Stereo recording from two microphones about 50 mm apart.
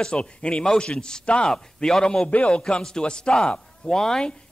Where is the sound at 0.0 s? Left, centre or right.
Centre.